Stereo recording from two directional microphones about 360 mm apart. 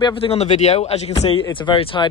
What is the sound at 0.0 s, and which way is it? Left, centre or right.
Speech, centre.